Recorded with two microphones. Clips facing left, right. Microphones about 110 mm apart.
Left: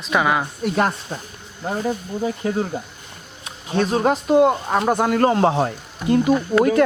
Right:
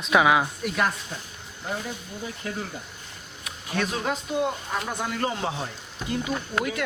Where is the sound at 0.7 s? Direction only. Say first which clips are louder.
Left 6 dB; 35° left (ahead or behind).